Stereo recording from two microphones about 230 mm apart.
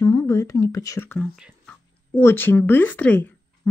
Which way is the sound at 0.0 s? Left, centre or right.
Centre.